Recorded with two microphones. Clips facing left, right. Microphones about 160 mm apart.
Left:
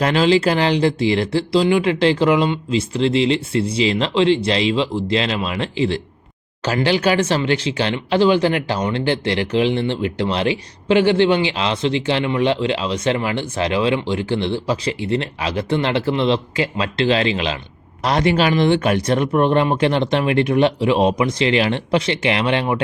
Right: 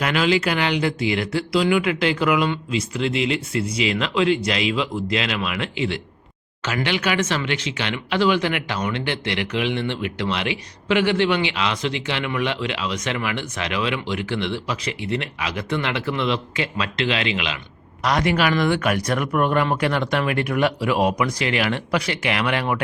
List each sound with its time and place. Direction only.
0.0 s speech: 30° left (ahead or behind)